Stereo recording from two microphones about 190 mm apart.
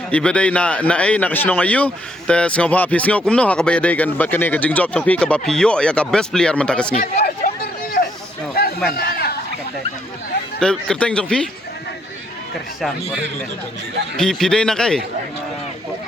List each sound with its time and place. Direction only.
0.1 s speech: 5° left (ahead or behind)
7.0 s a sound: 50° left (ahead or behind)
8.6 s a sound: 55° left (ahead or behind)
9.0 s chatter: 55° left (ahead or behind)
10.6 s speech: 5° left (ahead or behind)
14.2 s speech: 5° left (ahead or behind)